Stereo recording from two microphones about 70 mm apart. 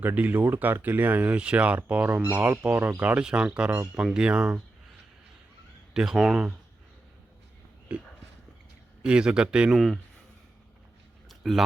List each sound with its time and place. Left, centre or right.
0.0 s speech: right
3.2 s speech: centre
5.9 s speech: centre
9.0 s speech: centre
11.3 s a sound: centre